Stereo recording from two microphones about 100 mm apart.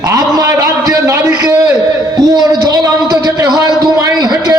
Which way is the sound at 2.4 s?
40° right (ahead or behind).